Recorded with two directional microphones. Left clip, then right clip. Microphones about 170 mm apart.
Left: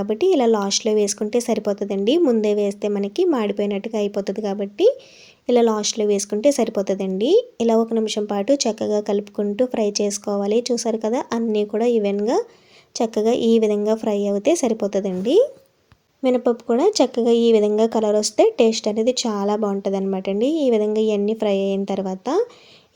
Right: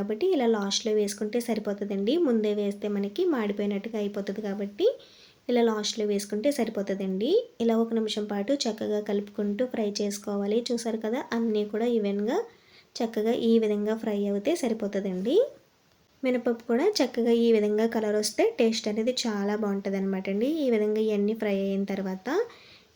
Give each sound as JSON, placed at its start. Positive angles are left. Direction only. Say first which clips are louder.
{"t": 0.1, "sound": "speech", "louder": "left 8 dB", "side_deg": 45}